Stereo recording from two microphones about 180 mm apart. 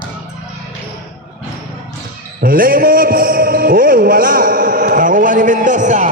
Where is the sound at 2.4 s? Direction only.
50° right (ahead or behind).